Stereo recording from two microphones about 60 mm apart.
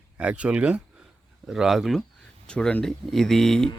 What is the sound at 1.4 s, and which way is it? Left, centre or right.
Speech, centre.